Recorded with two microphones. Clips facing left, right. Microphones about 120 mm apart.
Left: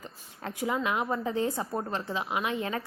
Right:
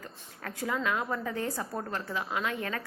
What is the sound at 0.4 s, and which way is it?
A woman's voice, 15° left (ahead or behind).